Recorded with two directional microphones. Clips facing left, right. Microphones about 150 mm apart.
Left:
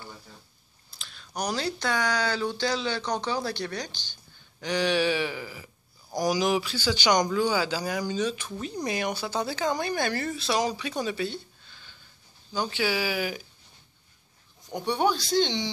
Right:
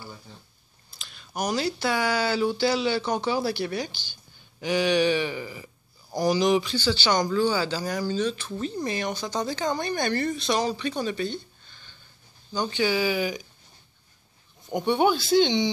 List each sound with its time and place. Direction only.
0.8 s speech: centre (ahead or behind)
14.7 s speech: centre (ahead or behind)